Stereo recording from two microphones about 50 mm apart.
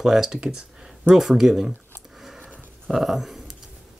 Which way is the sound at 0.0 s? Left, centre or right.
Centre.